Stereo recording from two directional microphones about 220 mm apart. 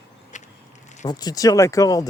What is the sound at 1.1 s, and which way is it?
Speech, 15° left (ahead or behind).